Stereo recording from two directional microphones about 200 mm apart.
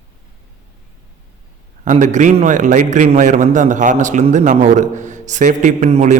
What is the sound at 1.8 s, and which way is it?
A man's voice, 40° right (ahead or behind).